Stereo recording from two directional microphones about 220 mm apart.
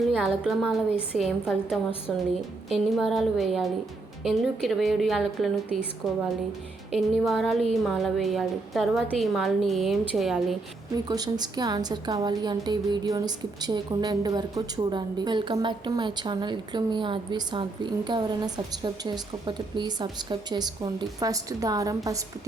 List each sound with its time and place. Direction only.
0.2 s a woman's voice: 5° right (ahead or behind)
11.1 s a woman's voice: 20° right (ahead or behind)